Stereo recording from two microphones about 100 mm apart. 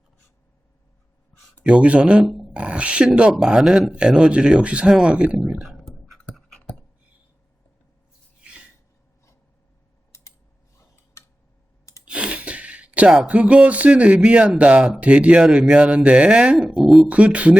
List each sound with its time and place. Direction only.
1.6 s speech: 10° right (ahead or behind)
2.2 s speech: centre (ahead or behind)
2.5 s speech: 10° right (ahead or behind)
5.4 s a sound: 5° right (ahead or behind)
10.8 s tick-tock: 30° left (ahead or behind)
12.0 s speech: 10° right (ahead or behind)
17.1 s speech: 15° right (ahead or behind)